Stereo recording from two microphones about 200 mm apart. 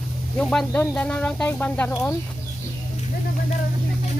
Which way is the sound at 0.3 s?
5° left (ahead or behind).